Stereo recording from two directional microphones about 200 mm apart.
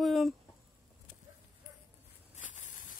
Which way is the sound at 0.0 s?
Centre (ahead or behind).